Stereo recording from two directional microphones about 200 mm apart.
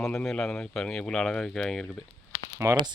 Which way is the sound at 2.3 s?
15° right (ahead or behind).